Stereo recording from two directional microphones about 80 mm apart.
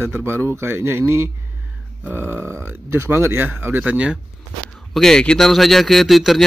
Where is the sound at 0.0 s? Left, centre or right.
Right.